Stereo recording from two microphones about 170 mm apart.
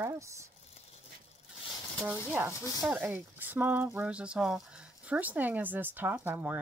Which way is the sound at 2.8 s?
5° right (ahead or behind).